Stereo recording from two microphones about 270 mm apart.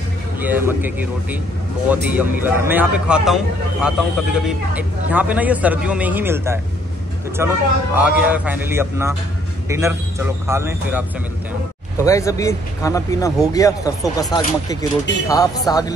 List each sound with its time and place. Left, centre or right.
0.4 s a man's voice: centre
12.0 s speech: centre